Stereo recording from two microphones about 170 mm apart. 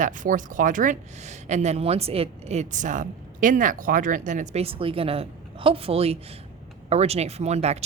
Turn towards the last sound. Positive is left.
turn(degrees=-40)  # may be behind; listen again after turning